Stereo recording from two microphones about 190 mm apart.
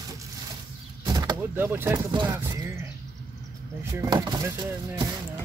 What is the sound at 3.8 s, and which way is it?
Speech, 15° right (ahead or behind).